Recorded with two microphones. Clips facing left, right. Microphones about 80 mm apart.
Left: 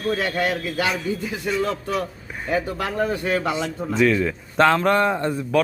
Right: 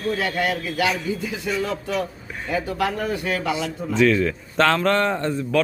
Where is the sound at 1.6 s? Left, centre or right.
Left.